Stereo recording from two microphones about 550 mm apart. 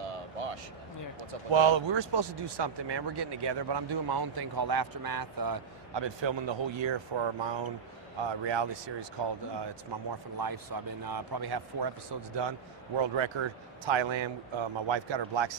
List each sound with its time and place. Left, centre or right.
0.1 s a sound: right
1.5 s a man's voice: right
10.4 s a man's voice: right